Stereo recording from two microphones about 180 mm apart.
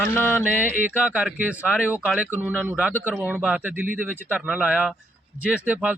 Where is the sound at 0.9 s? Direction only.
10° right (ahead or behind).